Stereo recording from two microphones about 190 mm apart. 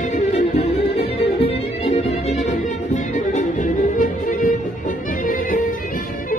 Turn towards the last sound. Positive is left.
turn(degrees=45)  # may be behind; listen again after turning